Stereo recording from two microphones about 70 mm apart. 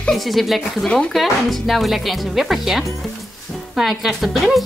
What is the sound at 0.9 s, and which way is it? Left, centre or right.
Speech, centre.